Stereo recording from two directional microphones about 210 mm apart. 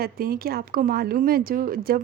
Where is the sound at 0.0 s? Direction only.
45° right (ahead or behind).